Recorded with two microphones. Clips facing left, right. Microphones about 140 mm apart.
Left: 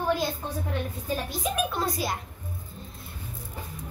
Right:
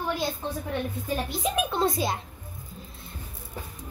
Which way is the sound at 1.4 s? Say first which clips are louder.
Right 4 dB; 25° right (ahead or behind).